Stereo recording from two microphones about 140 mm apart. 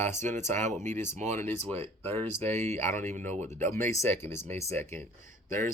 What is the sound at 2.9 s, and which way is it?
Speech, 60° right (ahead or behind).